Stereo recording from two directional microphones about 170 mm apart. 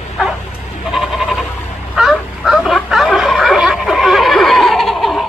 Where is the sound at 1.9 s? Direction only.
Centre (ahead or behind).